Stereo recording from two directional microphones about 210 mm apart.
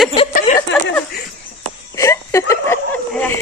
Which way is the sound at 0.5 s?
30° left (ahead or behind).